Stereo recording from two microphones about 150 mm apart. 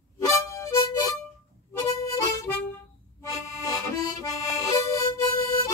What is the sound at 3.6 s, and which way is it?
Harmonica, 25° left (ahead or behind).